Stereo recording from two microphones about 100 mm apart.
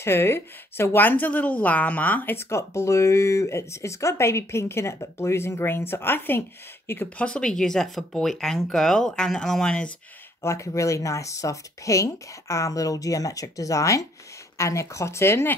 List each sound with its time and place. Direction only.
0.0 s speech: 25° left (ahead or behind); by 9.8 s 5° left (ahead or behind)
10.4 s speech: 30° left (ahead or behind)